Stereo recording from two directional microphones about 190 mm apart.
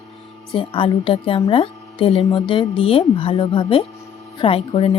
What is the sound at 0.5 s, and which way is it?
A woman's voice, 25° left (ahead or behind).